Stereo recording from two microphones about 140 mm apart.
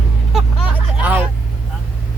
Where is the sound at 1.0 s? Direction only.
10° right (ahead or behind).